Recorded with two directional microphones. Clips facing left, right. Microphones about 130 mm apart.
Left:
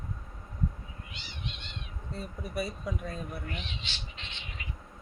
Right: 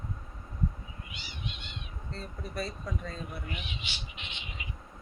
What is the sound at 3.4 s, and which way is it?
Cat, 10° right (ahead or behind).